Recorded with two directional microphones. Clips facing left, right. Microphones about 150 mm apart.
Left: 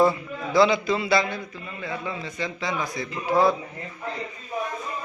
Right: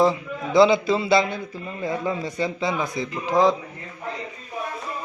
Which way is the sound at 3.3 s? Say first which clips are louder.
Right 1 dB; 40° right (ahead or behind).